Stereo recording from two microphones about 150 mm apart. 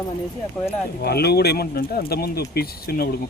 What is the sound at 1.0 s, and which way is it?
Speech, 90° left.